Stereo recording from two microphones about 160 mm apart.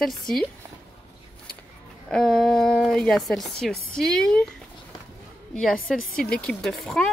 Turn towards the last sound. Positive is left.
turn(degrees=5)  # may be behind; listen again after turning